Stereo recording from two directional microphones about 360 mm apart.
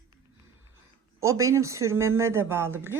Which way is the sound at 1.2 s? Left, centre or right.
Centre.